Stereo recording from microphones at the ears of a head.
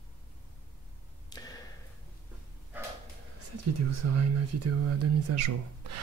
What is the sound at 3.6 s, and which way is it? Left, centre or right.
Speech, right.